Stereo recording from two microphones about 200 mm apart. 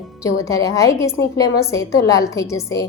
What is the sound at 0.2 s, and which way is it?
A woman's voice, 15° left (ahead or behind).